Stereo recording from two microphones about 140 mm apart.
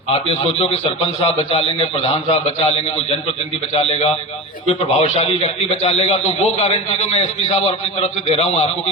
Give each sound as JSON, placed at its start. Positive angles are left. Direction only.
{"t": 0.6, "sound": "a man's voice", "side_deg": 45}
{"t": 3.8, "sound": "a man's voice", "side_deg": 45}